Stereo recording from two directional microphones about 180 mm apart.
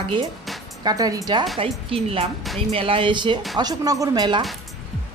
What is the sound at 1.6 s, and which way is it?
Speech, 30° right (ahead or behind).